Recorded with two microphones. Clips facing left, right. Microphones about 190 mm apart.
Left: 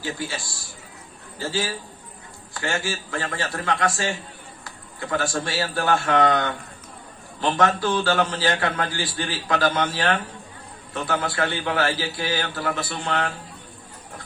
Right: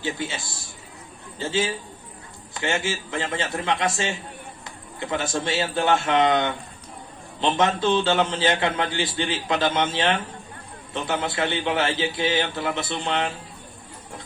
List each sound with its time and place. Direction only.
0.0 s a man's voice: 20° right (ahead or behind)